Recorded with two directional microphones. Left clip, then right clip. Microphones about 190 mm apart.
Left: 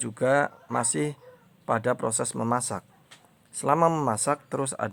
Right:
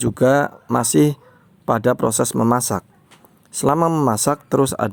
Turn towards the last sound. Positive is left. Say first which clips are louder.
# right 11 dB
turn(degrees=-45)  # may be behind; listen again after turning